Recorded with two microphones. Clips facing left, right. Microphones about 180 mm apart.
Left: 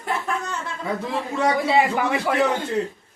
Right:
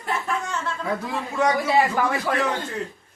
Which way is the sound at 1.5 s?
20° left (ahead or behind).